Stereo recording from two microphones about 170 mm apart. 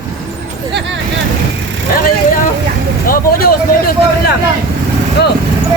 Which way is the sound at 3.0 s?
60° left (ahead or behind).